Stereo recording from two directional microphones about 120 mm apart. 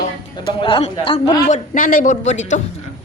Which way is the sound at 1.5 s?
85° left.